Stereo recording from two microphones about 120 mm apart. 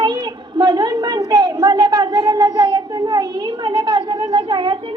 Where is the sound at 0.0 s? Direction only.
35° right (ahead or behind).